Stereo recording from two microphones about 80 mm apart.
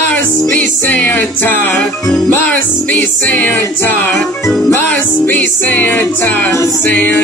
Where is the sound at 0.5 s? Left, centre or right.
Left.